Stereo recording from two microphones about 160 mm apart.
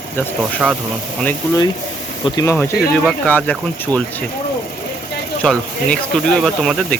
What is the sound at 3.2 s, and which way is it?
Speech, 10° left (ahead or behind).